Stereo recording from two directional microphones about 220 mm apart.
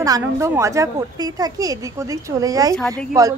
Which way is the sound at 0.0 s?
15° right (ahead or behind).